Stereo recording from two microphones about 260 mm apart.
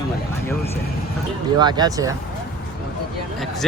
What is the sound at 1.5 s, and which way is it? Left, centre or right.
Speech, centre.